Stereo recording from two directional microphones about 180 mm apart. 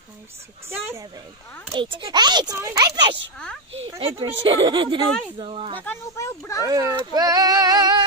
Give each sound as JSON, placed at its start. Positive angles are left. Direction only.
{"t": 0.7, "sound": "speech", "side_deg": -15}
{"t": 1.7, "sound": "speech", "side_deg": -25}
{"t": 5.8, "sound": "speech", "side_deg": 15}
{"t": 6.6, "sound": "speech", "side_deg": -15}